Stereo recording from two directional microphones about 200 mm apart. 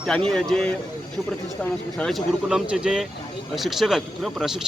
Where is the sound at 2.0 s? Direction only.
Centre (ahead or behind).